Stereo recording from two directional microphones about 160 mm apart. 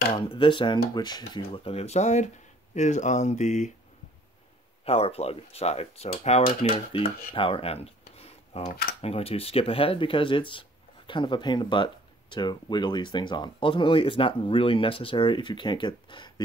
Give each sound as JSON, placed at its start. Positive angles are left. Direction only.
{"t": 0.1, "sound": "speech", "side_deg": 30}
{"t": 4.8, "sound": "speech", "side_deg": 40}